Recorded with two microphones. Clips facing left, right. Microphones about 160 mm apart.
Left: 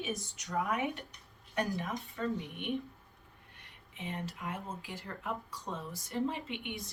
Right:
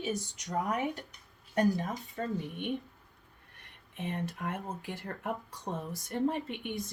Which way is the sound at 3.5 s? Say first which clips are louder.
Right 6 dB; 60° right (ahead or behind).